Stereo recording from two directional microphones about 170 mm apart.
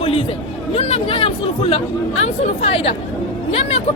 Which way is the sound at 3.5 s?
35° left (ahead or behind).